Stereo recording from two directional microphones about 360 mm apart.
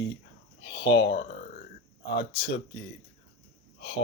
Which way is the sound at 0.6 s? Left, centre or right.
Left.